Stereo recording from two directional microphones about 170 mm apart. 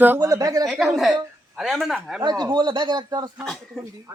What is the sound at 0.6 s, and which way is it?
A man's voice, centre (ahead or behind).